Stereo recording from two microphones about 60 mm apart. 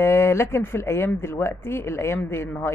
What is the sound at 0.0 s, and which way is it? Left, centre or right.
Speech, left.